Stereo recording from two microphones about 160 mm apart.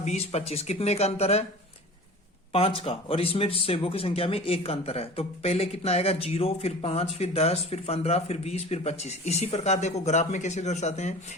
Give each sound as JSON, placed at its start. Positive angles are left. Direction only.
{"t": 0.0, "sound": "speech", "side_deg": 40}
{"t": 2.5, "sound": "speech", "side_deg": 35}